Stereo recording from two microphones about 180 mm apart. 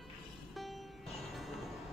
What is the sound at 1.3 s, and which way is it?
Music, centre (ahead or behind).